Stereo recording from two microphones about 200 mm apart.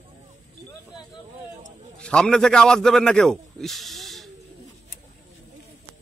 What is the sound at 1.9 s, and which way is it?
A man's voice, 5° left (ahead or behind).